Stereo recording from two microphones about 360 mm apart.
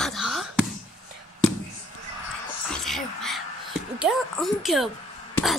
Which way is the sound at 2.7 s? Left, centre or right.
Centre.